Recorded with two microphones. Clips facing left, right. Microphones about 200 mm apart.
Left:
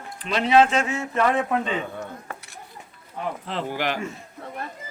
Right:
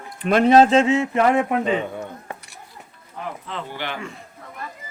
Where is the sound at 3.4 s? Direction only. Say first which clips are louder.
Left 3 dB; 35° left (ahead or behind).